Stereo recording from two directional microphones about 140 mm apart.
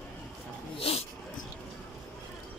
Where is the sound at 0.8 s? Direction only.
45° left (ahead or behind).